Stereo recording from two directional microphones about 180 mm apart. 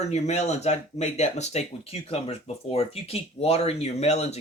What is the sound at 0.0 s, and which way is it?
Speech, 40° left (ahead or behind).